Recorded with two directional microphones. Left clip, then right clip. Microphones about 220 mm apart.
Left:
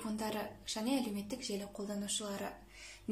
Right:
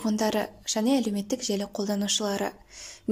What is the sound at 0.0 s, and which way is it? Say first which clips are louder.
Speech: right 13 dB; 40° right (ahead or behind).